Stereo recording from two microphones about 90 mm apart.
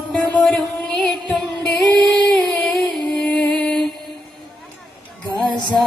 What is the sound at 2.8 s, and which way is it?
Music, 10° left (ahead or behind).